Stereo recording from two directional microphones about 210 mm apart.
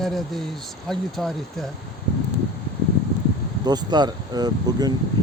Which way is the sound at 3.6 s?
20° right (ahead or behind).